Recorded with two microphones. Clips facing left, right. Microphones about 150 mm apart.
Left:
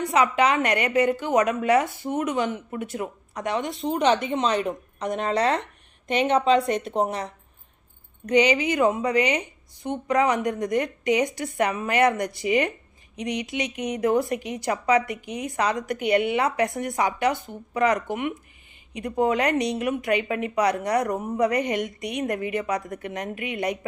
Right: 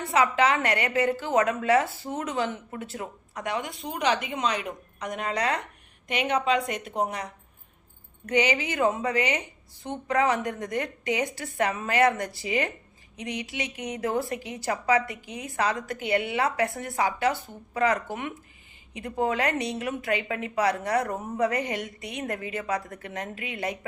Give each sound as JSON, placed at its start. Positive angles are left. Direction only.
{"t": 0.0, "sound": "a woman's voice", "side_deg": 20}
{"t": 8.3, "sound": "a woman's voice", "side_deg": 20}